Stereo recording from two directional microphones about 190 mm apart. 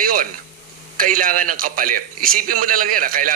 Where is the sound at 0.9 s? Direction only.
45° right (ahead or behind).